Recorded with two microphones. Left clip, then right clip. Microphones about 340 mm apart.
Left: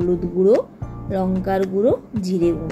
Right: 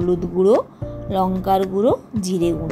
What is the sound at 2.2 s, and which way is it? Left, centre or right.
Speech, right.